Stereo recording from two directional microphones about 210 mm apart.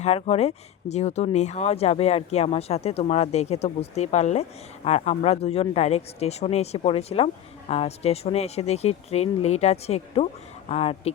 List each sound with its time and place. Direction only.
0.0 s speech: 30° left (ahead or behind)